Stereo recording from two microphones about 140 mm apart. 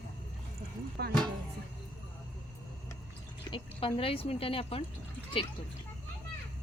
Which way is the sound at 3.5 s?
35° left (ahead or behind).